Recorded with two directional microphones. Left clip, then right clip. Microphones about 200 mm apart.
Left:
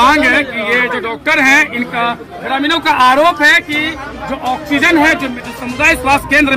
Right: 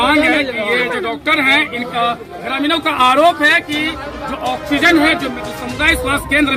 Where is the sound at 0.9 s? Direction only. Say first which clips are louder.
Left 3 dB; 10° left (ahead or behind).